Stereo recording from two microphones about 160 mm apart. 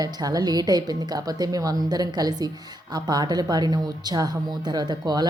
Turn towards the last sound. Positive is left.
turn(degrees=-25)  # may be behind; listen again after turning